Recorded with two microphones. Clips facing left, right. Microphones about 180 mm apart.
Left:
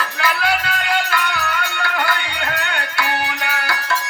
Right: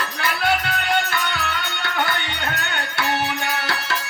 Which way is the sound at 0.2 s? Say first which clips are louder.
Left 1 dB; 25° right (ahead or behind).